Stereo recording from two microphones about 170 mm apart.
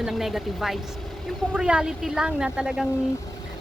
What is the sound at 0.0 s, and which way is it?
A woman's voice, centre (ahead or behind).